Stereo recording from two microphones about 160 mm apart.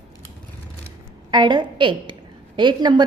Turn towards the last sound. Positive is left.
turn(degrees=-30)  # may be behind; listen again after turning